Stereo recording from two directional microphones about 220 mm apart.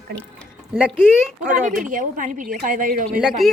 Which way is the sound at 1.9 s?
35° right (ahead or behind).